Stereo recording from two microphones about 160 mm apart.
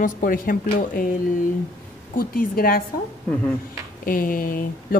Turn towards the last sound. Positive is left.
turn(degrees=60)  # may be behind; listen again after turning